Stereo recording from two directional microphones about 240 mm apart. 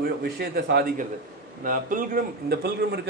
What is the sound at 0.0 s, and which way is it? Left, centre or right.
A man's voice, right.